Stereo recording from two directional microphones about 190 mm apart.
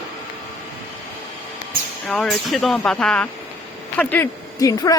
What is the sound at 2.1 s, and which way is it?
Speech, 5° left (ahead or behind).